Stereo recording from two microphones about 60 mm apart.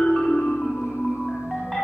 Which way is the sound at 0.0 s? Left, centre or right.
Centre.